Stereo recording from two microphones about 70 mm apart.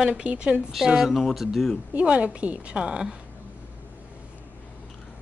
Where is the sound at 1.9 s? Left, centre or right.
Centre.